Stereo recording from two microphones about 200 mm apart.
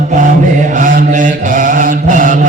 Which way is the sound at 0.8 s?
40° right (ahead or behind).